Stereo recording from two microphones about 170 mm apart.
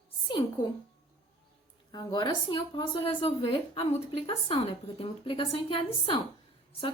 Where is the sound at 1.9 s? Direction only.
25° left (ahead or behind).